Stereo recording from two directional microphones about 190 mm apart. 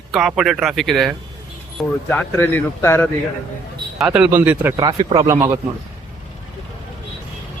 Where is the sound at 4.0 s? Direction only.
5° right (ahead or behind).